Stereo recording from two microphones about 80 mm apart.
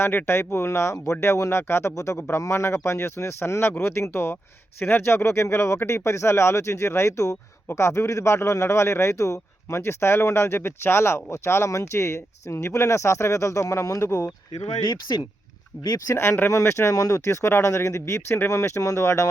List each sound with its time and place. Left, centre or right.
0.0 s speech: left
14.8 s speech: left
16.0 s speech: left